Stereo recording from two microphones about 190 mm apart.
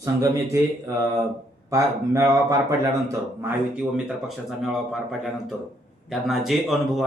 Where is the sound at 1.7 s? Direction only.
15° right (ahead or behind).